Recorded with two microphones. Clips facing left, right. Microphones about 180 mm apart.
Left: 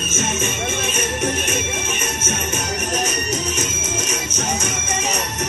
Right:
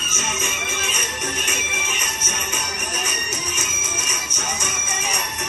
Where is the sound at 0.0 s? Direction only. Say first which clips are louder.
Left 6 dB; 45° left (ahead or behind).